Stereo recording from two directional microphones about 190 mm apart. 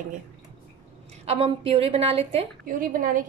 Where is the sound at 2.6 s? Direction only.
50° right (ahead or behind).